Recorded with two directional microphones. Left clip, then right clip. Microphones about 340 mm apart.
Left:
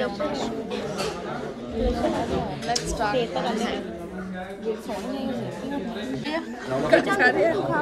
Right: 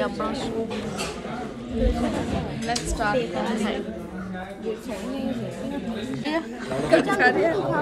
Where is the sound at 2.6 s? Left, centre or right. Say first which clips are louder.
Right 2 dB; centre.